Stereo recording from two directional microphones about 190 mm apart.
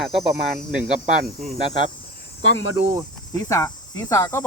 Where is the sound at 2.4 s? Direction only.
90° left.